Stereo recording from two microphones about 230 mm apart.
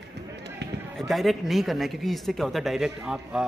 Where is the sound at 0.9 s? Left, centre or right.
Centre.